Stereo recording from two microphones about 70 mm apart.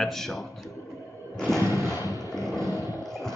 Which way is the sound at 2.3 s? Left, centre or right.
Centre.